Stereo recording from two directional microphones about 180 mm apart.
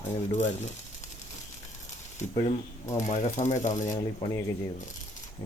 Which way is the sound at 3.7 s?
20° left (ahead or behind).